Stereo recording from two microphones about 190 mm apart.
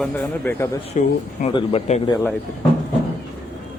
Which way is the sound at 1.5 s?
30° left (ahead or behind).